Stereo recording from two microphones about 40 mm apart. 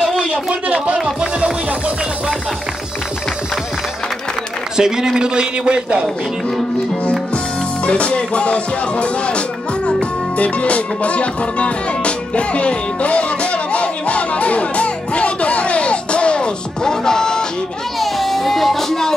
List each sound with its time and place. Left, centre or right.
0.9 s a man's voice: centre
4.7 s a man's voice: centre
7.8 s music: left
18.0 s music: centre